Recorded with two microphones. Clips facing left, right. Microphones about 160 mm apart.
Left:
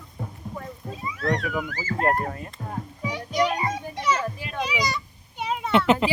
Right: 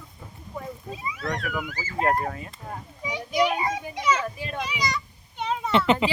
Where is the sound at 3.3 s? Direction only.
10° right (ahead or behind).